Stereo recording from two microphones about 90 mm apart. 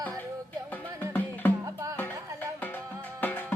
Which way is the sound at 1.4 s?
25° left (ahead or behind).